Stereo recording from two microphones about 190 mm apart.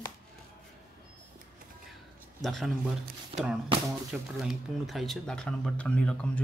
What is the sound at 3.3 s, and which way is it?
Speech, 30° right (ahead or behind).